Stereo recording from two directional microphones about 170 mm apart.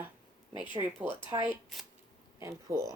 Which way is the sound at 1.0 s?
10° right (ahead or behind).